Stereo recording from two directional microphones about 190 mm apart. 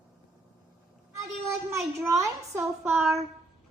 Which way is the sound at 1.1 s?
15° right (ahead or behind).